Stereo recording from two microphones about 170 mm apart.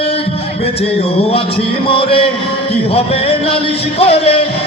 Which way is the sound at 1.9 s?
35° left (ahead or behind).